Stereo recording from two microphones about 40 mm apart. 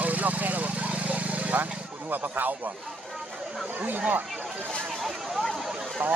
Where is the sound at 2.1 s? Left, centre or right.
Right.